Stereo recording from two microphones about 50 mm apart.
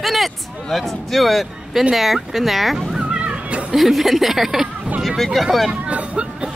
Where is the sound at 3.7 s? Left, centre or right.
Centre.